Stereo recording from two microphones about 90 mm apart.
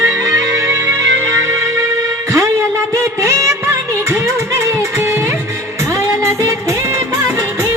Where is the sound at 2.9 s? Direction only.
35° right (ahead or behind).